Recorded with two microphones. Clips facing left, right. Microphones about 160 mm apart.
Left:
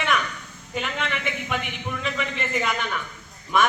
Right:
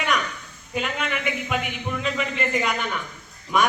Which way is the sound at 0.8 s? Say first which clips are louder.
Right 1 dB; 5° right (ahead or behind).